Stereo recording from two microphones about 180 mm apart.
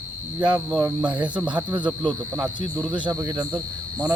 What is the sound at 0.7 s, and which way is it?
Speech, 5° right (ahead or behind).